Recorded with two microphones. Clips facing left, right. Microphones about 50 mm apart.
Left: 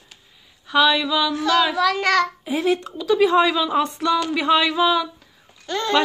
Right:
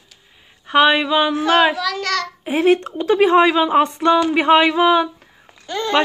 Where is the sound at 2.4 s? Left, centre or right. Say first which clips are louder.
Right 6 dB; right.